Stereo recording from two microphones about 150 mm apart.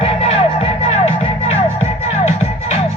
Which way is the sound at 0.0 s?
40° left (ahead or behind).